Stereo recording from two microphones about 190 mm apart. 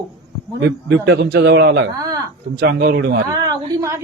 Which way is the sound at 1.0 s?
65° right (ahead or behind).